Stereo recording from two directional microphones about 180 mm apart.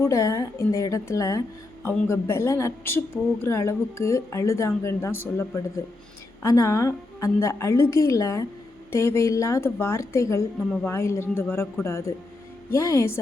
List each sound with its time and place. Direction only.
0.0 s a woman's voice: 15° left (ahead or behind)
6.4 s a woman's voice: 15° left (ahead or behind)